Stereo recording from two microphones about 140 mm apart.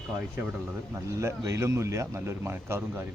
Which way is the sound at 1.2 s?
20° right (ahead or behind).